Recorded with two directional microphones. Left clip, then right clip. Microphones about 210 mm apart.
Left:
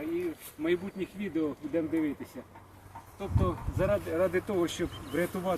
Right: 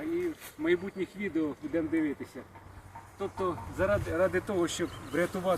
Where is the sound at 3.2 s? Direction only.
15° left (ahead or behind).